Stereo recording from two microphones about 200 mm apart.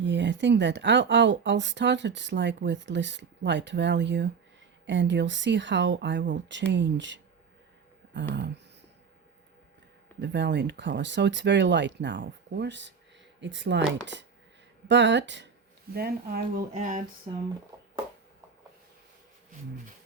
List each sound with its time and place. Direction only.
0.0 s speech: 65° right (ahead or behind)
10.2 s speech: 60° right (ahead or behind)
16.0 s speech: 50° right (ahead or behind)